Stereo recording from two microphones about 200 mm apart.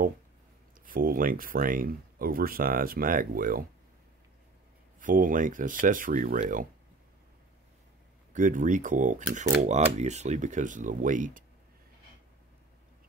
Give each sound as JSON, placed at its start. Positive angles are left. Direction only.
{"t": 0.8, "sound": "speech", "side_deg": -45}
{"t": 5.0, "sound": "speech", "side_deg": -40}
{"t": 8.3, "sound": "speech", "side_deg": -40}